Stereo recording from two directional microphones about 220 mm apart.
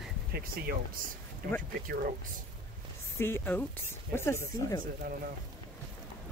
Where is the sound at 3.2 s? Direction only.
10° left (ahead or behind).